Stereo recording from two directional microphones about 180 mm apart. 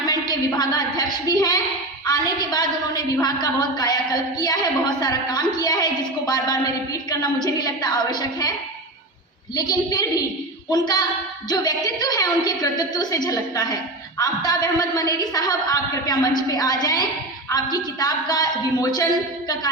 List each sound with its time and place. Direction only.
0.0 s a woman's voice: 20° left (ahead or behind)
9.6 s a woman's voice: 20° left (ahead or behind)